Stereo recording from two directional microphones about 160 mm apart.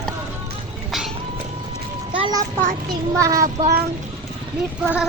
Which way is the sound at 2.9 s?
20° right (ahead or behind).